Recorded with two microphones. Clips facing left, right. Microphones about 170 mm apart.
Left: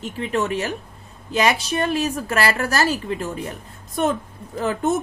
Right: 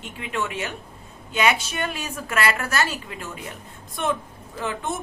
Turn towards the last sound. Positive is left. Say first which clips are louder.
# left 7 dB
turn(degrees=40)  # may be behind; listen again after turning